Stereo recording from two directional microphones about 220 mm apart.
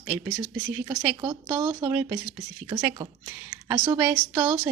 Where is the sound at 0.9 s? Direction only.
20° right (ahead or behind).